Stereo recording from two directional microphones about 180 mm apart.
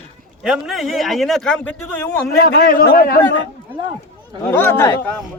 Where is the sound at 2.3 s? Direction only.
65° left (ahead or behind).